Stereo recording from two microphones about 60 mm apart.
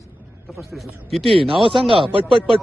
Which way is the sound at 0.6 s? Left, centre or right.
Centre.